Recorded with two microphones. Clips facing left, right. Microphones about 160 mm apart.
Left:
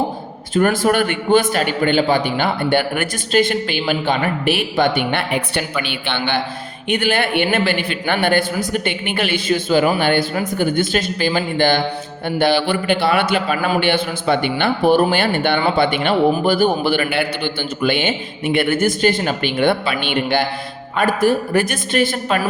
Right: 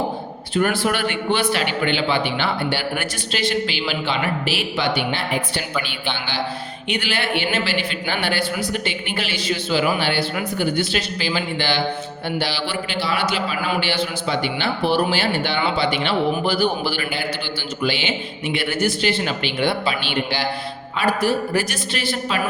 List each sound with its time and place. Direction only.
0.5 s a man's voice: 45° left (ahead or behind)